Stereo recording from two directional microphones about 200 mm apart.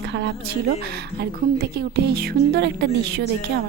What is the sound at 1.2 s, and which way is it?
A woman's voice, 55° right (ahead or behind).